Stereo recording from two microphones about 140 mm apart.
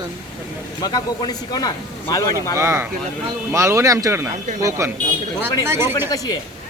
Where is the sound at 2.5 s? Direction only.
20° right (ahead or behind).